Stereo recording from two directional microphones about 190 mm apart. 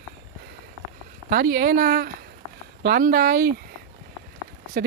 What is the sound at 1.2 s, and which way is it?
Speech, 50° right (ahead or behind).